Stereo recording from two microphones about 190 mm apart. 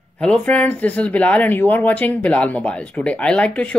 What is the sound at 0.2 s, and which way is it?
Speech, 5° left (ahead or behind).